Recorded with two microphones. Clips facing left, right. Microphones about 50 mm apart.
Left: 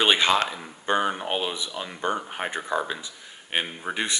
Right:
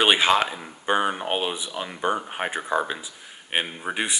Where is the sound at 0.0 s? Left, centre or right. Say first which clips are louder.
Right 2 dB; centre.